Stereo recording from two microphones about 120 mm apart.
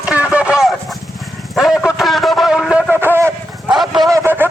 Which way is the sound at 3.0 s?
20° right (ahead or behind).